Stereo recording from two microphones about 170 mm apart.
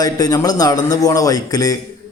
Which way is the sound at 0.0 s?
20° left (ahead or behind).